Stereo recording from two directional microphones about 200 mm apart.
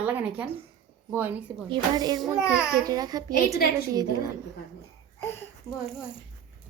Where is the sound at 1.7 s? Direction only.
20° right (ahead or behind).